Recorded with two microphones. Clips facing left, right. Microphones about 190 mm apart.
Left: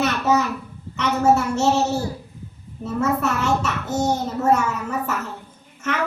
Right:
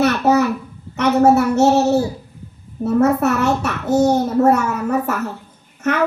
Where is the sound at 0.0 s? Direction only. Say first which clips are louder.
Right 5 dB; 60° right (ahead or behind).